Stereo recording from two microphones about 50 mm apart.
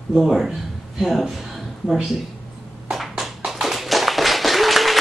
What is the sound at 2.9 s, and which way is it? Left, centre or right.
Tap, centre.